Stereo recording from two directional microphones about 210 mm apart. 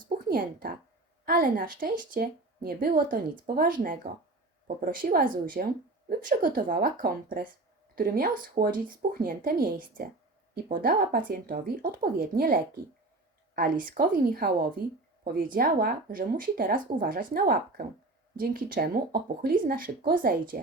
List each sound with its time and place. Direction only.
0.3 s speech: 45° right (ahead or behind)
13.6 s speech: 40° right (ahead or behind)